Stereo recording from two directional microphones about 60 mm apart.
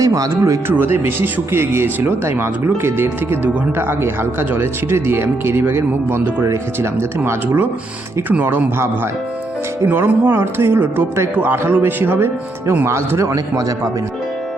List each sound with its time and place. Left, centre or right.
0.0 s speech: right
0.7 s speech: right
7.4 s speech: right
9.8 s speech: right
12.1 s speech: right
13.3 s a man's voice: right